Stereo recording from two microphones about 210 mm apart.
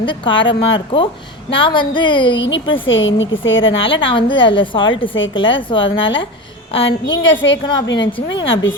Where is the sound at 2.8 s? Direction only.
65° left (ahead or behind).